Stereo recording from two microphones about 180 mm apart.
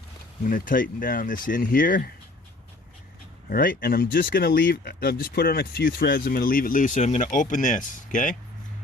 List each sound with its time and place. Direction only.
0.4 s speech: 50° left (ahead or behind)
3.5 s speech: 50° left (ahead or behind)